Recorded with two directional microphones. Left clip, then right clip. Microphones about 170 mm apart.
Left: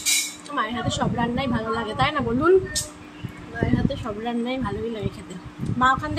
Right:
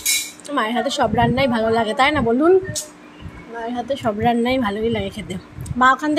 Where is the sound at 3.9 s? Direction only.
40° right (ahead or behind).